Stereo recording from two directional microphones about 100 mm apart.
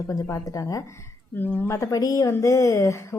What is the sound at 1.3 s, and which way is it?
Speech, 20° left (ahead or behind).